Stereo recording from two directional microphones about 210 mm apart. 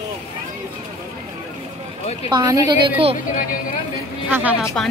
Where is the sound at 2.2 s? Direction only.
20° right (ahead or behind).